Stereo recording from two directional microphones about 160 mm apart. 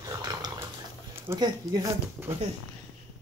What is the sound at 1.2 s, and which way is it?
Dog, 20° right (ahead or behind).